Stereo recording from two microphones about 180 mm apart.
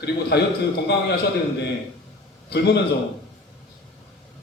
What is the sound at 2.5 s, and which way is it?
Speech, 70° left (ahead or behind).